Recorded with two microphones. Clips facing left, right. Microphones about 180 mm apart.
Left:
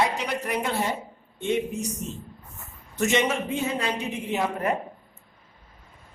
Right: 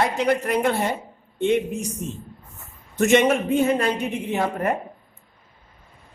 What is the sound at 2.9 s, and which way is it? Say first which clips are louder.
Speech: right 6 dB; 50° right (ahead or behind).